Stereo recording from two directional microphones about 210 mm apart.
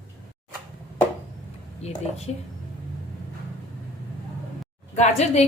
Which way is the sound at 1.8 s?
30° left (ahead or behind).